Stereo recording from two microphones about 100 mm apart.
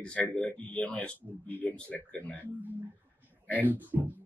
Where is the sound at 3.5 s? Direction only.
15° left (ahead or behind).